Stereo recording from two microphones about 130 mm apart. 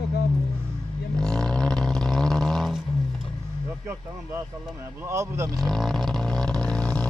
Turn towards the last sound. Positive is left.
turn(degrees=10)  # may be behind; listen again after turning